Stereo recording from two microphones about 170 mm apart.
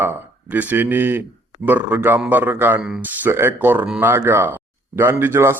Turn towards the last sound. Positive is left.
turn(degrees=-15)  # may be behind; listen again after turning